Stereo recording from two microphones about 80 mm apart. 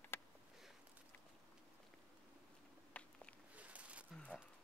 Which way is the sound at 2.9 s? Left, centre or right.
Centre.